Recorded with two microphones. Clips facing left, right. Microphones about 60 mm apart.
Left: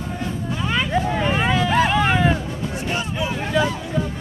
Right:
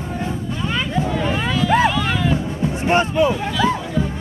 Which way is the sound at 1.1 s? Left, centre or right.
Left.